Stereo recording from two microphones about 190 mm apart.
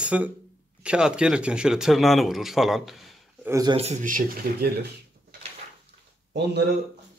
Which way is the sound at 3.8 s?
35° right (ahead or behind).